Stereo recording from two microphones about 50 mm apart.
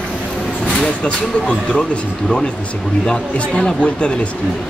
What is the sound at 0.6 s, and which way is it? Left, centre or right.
Speech, centre.